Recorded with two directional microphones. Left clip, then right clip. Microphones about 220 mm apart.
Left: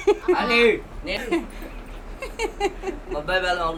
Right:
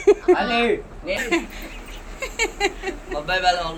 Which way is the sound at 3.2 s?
50° left (ahead or behind).